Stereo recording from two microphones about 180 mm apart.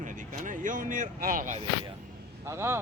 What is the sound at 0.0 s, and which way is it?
Speech, 45° right (ahead or behind).